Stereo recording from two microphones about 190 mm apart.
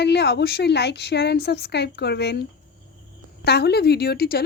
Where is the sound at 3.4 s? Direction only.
60° left (ahead or behind).